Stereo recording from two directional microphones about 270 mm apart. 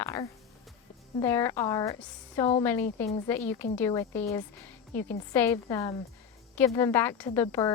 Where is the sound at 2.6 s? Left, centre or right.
Centre.